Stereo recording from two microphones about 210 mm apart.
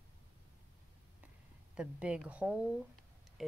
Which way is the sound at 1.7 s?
5° right (ahead or behind).